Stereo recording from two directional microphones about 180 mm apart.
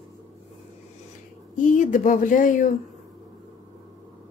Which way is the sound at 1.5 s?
45° left (ahead or behind).